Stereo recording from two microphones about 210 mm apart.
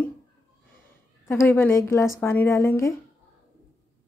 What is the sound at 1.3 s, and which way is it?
Speech, 10° left (ahead or behind).